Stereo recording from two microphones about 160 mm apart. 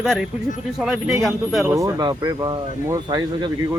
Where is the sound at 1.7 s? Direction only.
20° right (ahead or behind).